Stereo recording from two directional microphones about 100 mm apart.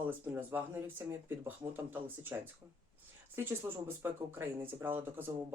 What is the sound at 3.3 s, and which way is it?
Speech, 25° right (ahead or behind).